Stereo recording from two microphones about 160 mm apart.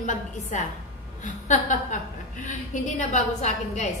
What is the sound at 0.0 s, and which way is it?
A woman's voice, 50° left (ahead or behind).